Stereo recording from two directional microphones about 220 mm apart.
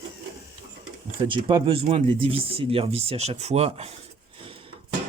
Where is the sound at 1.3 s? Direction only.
20° right (ahead or behind).